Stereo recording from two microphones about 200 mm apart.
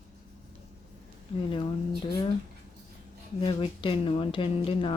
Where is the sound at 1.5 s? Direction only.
25° left (ahead or behind).